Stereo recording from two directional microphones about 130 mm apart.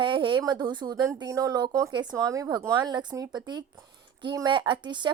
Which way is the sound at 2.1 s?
25° right (ahead or behind).